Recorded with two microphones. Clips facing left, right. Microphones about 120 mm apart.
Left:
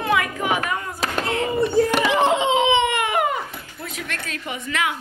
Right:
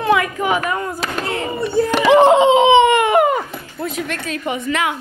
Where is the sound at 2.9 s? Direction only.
35° right (ahead or behind).